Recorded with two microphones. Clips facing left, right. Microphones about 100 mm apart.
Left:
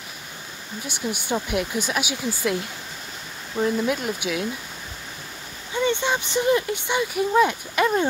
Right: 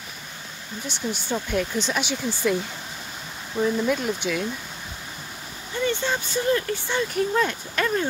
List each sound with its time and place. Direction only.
0.8 s speech: 10° left (ahead or behind)
5.9 s speech: 20° left (ahead or behind)